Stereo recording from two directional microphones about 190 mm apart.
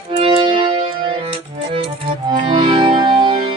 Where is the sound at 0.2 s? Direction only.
30° right (ahead or behind).